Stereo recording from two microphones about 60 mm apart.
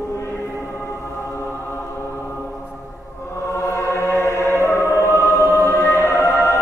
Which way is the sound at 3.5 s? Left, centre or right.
Left.